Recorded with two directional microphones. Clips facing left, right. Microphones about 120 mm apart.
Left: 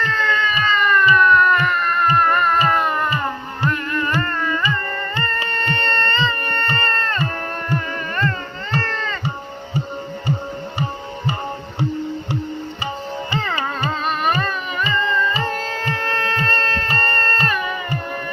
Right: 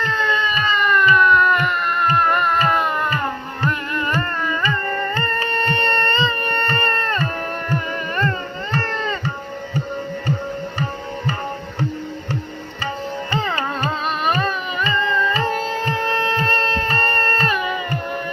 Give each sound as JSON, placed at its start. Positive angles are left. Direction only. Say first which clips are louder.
{"t": 0.1, "sound": "a sound", "louder": "even", "side_deg": -15}
{"t": 4.2, "sound": "carnatic music", "louder": "left 1 dB", "side_deg": -15}
{"t": 5.7, "sound": "music", "louder": "even", "side_deg": -20}
{"t": 8.8, "sound": "music", "louder": "right 2 dB", "side_deg": -15}
{"t": 14.3, "sound": "a sound", "louder": "right 1 dB", "side_deg": -20}
{"t": 15.0, "sound": "music", "louder": "even", "side_deg": -15}
{"t": 15.4, "sound": "shofar", "louder": "right 3 dB", "side_deg": -20}